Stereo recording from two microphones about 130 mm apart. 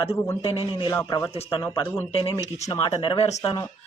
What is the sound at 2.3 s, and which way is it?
Speech, 25° right (ahead or behind).